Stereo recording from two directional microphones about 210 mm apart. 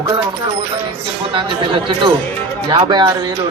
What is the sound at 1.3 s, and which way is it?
Speech, 20° right (ahead or behind).